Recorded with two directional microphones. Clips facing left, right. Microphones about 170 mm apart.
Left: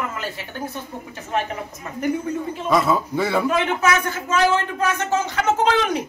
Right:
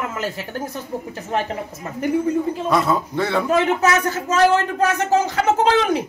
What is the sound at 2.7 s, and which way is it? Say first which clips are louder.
Speech: left 2 dB; centre (ahead or behind).